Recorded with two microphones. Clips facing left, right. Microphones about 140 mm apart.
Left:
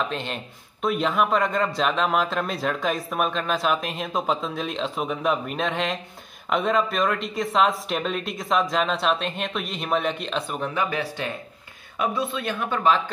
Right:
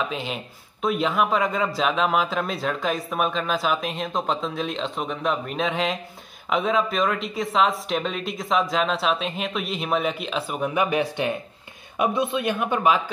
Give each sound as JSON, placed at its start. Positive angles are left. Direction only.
{"t": 0.1, "sound": "speech", "side_deg": -5}